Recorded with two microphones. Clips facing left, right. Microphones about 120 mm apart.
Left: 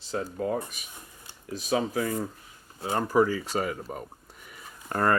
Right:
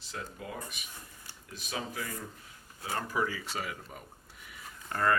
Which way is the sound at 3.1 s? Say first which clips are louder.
Left 12 dB; 40° left (ahead or behind).